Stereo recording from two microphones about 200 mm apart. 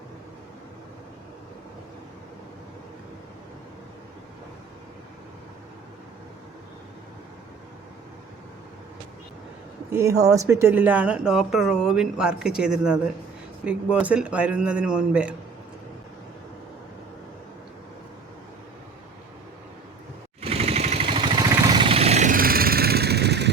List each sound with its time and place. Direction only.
9.9 s speech: 15° right (ahead or behind)
20.4 s vehicle: 30° right (ahead or behind); by 23.5 s 55° right (ahead or behind)